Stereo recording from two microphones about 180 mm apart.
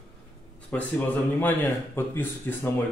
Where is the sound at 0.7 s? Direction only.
10° left (ahead or behind).